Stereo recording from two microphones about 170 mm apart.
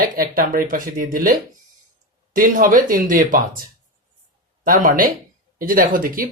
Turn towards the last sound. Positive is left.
turn(degrees=-55)  # may be behind; listen again after turning